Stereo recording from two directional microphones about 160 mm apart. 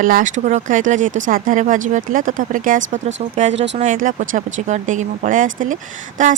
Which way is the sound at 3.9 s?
55° right (ahead or behind).